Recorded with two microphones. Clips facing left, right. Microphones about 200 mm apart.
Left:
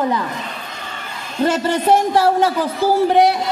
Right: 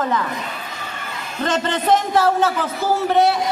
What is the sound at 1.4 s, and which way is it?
Speech, 10° left (ahead or behind).